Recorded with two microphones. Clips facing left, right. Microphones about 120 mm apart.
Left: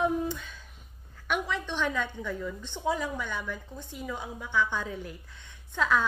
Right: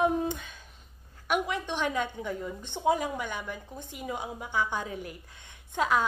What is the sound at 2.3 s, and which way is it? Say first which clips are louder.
Speech: even; 45° right (ahead or behind).